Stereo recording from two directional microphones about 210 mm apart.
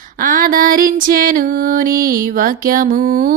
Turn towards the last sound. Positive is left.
turn(degrees=-40)  # may be behind; listen again after turning